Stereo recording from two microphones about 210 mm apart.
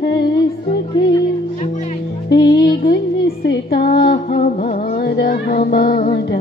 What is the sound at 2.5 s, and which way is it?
Music, 20° left (ahead or behind).